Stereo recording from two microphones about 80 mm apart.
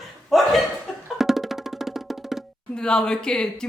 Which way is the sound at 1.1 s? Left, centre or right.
Centre.